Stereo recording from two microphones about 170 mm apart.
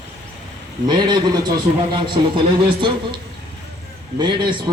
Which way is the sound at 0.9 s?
25° right (ahead or behind).